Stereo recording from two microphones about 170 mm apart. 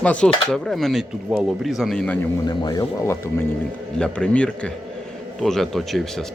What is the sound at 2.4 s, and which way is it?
Speech, 25° left (ahead or behind).